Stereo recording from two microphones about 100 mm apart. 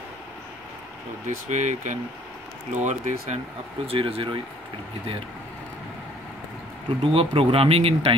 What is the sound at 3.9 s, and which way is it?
Speech, 65° right (ahead or behind).